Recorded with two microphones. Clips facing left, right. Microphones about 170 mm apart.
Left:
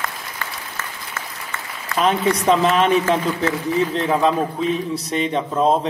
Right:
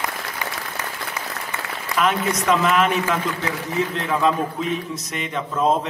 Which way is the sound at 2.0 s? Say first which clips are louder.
Left 4 dB; 35° left (ahead or behind).